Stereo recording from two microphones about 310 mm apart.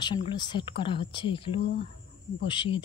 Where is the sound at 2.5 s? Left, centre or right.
Centre.